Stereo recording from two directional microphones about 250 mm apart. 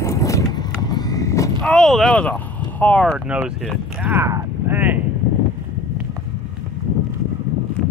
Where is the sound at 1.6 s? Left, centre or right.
Centre.